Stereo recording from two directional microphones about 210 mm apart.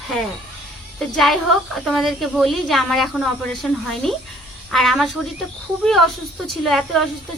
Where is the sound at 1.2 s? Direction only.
Centre (ahead or behind).